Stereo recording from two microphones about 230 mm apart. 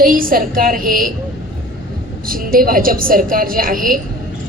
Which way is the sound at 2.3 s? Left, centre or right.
Right.